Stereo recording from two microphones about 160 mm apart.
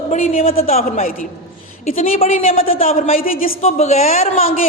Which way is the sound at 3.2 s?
60° left (ahead or behind).